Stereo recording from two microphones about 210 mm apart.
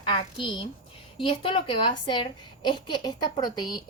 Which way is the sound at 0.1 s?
25° left (ahead or behind).